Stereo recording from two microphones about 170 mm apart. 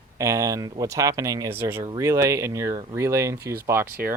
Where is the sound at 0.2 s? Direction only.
20° right (ahead or behind).